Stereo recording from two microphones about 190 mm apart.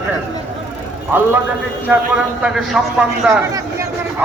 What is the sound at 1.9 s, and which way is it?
A man's voice, 10° right (ahead or behind).